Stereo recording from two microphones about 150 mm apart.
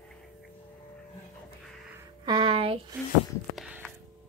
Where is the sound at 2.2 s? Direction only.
30° right (ahead or behind).